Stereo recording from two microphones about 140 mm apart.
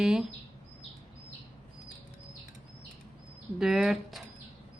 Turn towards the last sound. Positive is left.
turn(degrees=0)  # may be behind; listen again after turning